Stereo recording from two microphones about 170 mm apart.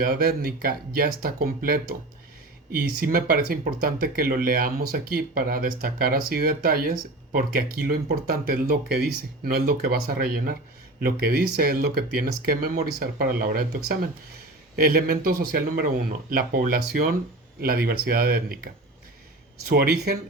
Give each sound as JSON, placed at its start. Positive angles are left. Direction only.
{"t": 0.0, "sound": "speech", "side_deg": -60}